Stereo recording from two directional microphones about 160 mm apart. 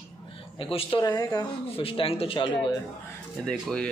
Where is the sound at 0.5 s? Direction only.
35° left (ahead or behind).